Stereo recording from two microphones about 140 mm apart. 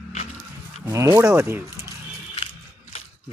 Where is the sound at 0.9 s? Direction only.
25° right (ahead or behind).